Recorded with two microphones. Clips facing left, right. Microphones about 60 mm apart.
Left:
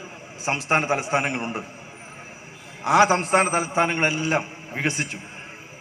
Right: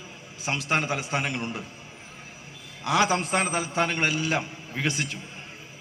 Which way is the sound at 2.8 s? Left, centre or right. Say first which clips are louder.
Left 6 dB; left.